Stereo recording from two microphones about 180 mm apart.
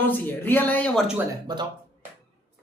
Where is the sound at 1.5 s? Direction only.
25° right (ahead or behind).